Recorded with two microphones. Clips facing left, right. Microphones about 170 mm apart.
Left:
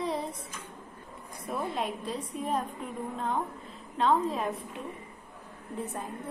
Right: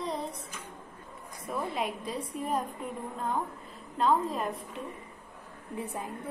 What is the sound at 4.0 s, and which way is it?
Speech, centre (ahead or behind).